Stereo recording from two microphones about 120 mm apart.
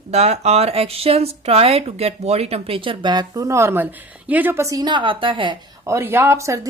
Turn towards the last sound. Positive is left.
turn(degrees=-25)  # may be behind; listen again after turning